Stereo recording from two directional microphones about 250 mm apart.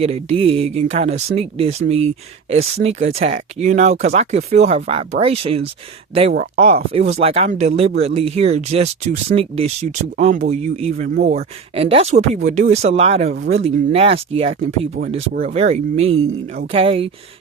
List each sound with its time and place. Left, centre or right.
0.0 s speech: right